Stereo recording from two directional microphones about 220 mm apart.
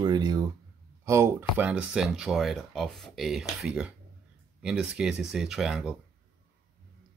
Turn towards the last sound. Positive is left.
turn(degrees=0)  # may be behind; listen again after turning